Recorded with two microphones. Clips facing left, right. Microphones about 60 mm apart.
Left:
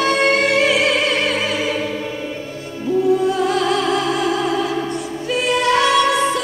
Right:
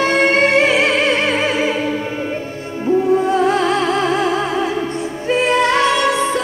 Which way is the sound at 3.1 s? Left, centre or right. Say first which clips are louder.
Right 3 dB; right.